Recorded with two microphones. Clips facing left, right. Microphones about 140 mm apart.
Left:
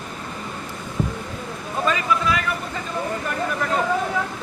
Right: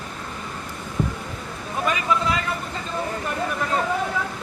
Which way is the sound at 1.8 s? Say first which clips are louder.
Left 1 dB; 20° right (ahead or behind).